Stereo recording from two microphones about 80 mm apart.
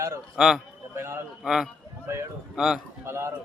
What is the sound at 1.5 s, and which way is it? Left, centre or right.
A man's voice, centre.